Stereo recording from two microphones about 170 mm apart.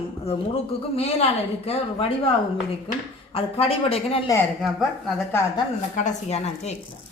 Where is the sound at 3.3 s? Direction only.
35° left (ahead or behind).